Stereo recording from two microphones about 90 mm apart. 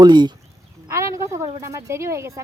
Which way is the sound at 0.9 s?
35° right (ahead or behind).